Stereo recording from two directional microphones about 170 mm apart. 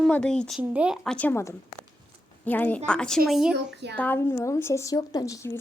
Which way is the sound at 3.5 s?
90° right.